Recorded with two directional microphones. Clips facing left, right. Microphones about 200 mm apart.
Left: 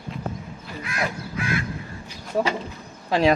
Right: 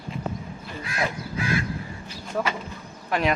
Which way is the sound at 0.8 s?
30° right (ahead or behind).